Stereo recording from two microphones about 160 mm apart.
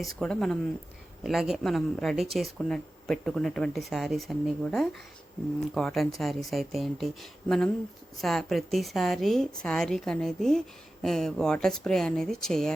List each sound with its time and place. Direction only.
0.0 s speech: 5° left (ahead or behind)